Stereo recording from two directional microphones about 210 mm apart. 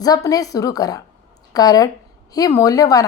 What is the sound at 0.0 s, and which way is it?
A woman's voice, 15° left (ahead or behind).